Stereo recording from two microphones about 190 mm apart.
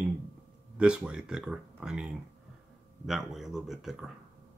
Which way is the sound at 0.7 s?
5° right (ahead or behind).